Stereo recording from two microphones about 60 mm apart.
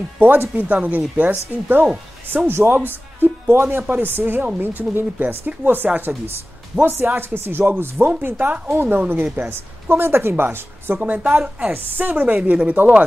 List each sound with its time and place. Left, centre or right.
0.2 s speech: right
6.1 s speech: right
6.8 s speech: right